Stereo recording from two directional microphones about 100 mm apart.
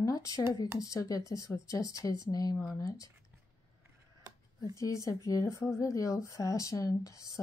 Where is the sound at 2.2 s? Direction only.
40° left (ahead or behind).